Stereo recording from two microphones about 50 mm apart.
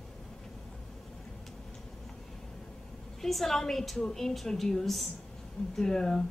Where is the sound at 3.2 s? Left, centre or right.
Centre.